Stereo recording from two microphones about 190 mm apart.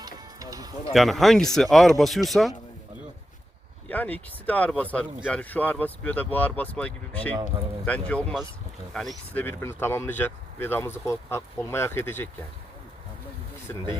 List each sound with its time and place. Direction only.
0.0 s music: 20° right (ahead or behind)
0.9 s speech: centre (ahead or behind)
3.8 s speech: 10° left (ahead or behind)